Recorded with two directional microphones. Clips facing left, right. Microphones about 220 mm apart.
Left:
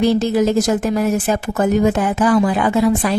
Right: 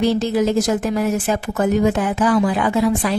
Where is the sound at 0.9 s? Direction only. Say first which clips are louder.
Left 2 dB; 45° left (ahead or behind).